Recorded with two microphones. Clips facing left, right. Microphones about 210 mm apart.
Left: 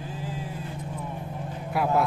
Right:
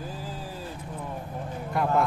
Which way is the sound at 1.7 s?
5° left (ahead or behind).